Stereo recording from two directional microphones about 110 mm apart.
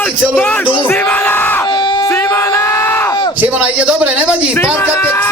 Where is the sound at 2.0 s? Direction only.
25° left (ahead or behind).